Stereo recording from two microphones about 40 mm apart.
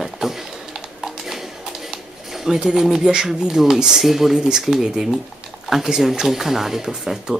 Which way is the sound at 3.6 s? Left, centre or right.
Centre.